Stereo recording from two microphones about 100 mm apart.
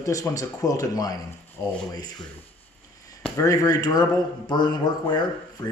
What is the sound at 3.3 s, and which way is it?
Speech, 35° left (ahead or behind).